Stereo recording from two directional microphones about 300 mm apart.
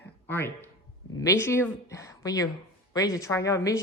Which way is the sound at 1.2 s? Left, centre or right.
Centre.